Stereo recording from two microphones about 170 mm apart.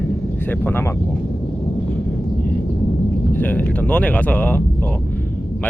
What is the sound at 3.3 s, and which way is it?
Speech, 10° left (ahead or behind).